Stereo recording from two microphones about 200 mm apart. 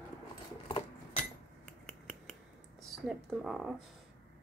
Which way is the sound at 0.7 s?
25° left (ahead or behind).